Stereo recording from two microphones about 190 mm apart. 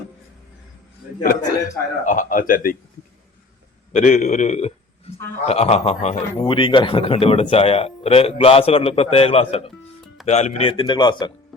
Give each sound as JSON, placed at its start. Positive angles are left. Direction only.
{"t": 1.2, "sound": "speech", "side_deg": 50}
{"t": 3.9, "sound": "a man's voice", "side_deg": 40}